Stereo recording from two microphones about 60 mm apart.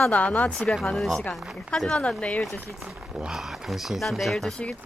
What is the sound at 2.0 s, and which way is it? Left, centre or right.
Speech, left.